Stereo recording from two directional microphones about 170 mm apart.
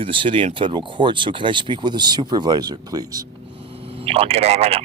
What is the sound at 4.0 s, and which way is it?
Speech, 35° right (ahead or behind).